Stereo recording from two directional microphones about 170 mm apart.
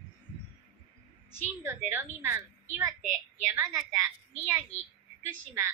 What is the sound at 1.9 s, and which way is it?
A woman's voice, 15° right (ahead or behind).